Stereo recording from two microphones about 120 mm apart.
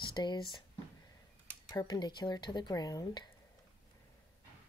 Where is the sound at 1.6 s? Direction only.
35° left (ahead or behind).